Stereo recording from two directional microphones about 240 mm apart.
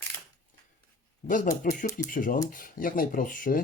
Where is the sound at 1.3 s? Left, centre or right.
Left.